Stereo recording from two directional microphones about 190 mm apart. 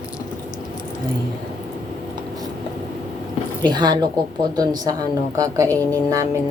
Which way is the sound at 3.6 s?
25° right (ahead or behind).